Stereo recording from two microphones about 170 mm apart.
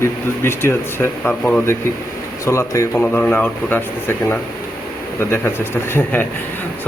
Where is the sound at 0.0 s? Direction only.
15° left (ahead or behind).